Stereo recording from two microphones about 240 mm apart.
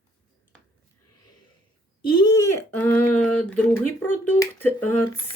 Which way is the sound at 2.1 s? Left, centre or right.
Centre.